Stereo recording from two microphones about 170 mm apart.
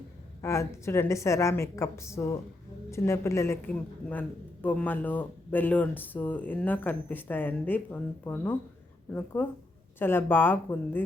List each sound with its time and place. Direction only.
0.4 s speech: 15° left (ahead or behind)